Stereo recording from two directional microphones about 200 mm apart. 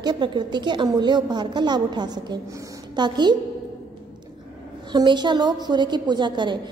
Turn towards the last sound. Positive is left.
turn(degrees=-20)  # may be behind; listen again after turning